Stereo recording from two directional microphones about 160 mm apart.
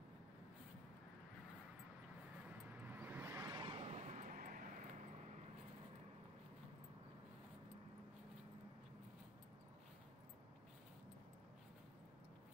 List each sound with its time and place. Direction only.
2.8 s vehicle: 10° right (ahead or behind); by 4.8 s 55° right (ahead or behind)